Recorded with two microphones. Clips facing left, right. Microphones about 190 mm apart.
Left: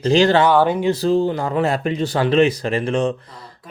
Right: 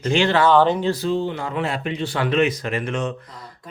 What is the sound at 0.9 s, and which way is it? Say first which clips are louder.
Speech: left 5 dB; 35° left (ahead or behind).